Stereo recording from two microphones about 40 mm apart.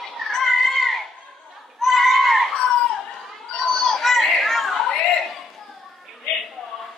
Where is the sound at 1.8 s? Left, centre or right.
Centre.